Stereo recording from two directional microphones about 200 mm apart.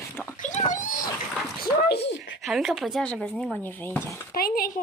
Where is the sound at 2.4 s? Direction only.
Centre (ahead or behind).